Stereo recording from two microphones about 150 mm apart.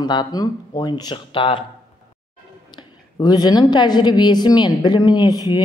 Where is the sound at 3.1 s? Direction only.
25° left (ahead or behind).